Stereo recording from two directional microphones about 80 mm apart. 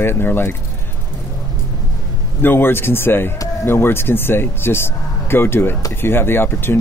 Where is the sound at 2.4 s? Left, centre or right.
Left.